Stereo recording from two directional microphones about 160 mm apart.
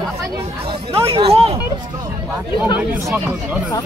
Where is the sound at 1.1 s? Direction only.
35° right (ahead or behind).